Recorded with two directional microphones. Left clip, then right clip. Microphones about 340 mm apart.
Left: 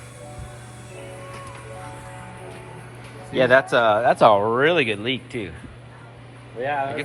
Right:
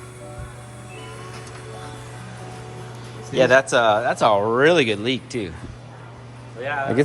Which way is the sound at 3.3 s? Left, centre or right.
Centre.